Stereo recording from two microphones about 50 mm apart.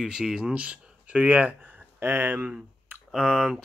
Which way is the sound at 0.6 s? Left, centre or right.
Right.